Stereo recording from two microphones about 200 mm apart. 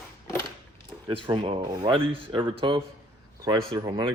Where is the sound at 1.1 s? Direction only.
25° right (ahead or behind).